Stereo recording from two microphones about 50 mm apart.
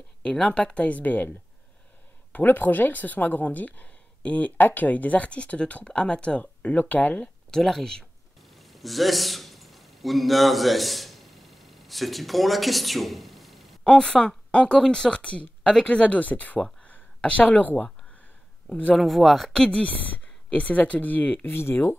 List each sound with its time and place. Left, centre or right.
0.2 s speech: centre; by 1.3 s left
2.3 s a woman's voice: left
7.5 s speech: centre
8.4 s a sound: centre
14.0 s speech: centre
18.9 s speech: centre
20.4 s a woman's voice: left
21.5 s speech: left